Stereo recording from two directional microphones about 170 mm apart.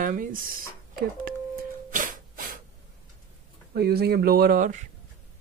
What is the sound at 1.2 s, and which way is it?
Music, 55° right (ahead or behind).